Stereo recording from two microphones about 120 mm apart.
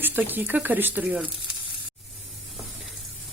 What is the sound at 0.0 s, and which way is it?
Speech, 15° right (ahead or behind).